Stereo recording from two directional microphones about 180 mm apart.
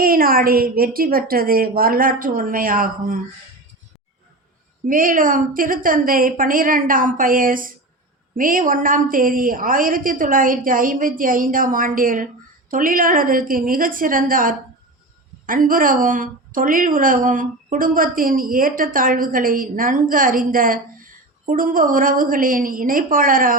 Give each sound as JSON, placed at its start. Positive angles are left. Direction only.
{"t": 0.0, "sound": "a woman's voice", "side_deg": -55}
{"t": 4.9, "sound": "a woman's voice", "side_deg": -50}